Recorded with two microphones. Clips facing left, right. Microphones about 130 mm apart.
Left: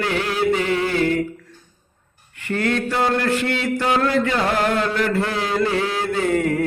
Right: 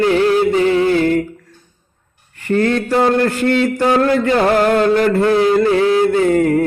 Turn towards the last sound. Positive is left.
turn(degrees=-40)  # may be behind; listen again after turning